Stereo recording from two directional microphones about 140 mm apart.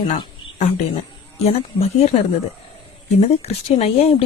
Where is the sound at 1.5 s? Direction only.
45° left (ahead or behind).